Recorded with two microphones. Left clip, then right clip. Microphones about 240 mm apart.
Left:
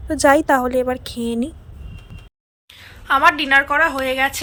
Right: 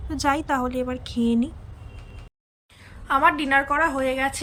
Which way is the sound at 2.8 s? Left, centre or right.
Centre.